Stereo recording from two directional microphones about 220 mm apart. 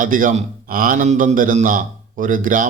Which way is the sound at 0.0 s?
40° right (ahead or behind).